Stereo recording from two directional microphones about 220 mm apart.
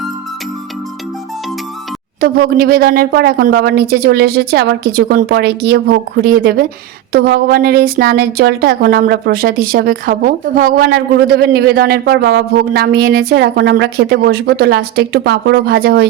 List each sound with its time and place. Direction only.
2.2 s speech: 45° right (ahead or behind)